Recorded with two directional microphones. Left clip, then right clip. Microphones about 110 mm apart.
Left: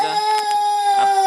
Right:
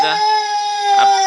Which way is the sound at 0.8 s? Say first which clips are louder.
Right 7 dB; 5° left (ahead or behind).